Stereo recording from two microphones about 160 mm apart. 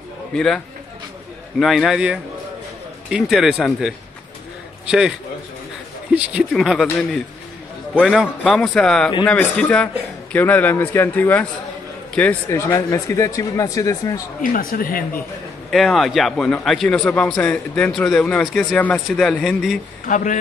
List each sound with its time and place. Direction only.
0.3 s a man's voice: centre (ahead or behind)
1.6 s a man's voice: centre (ahead or behind)
6.1 s a man's voice: 5° right (ahead or behind); by 14.2 s 20° left (ahead or behind)
14.4 s speech: 60° left (ahead or behind)
15.7 s a man's voice: centre (ahead or behind)
20.1 s speech: 50° left (ahead or behind)